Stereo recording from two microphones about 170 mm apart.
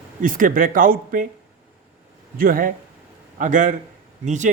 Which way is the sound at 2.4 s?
55° right (ahead or behind).